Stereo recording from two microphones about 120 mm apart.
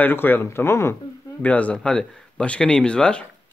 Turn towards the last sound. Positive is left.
turn(degrees=10)  # may be behind; listen again after turning